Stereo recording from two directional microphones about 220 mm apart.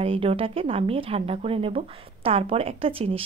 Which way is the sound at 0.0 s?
25° right (ahead or behind).